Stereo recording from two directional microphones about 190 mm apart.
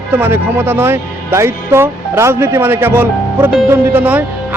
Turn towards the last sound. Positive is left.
turn(degrees=-10)  # may be behind; listen again after turning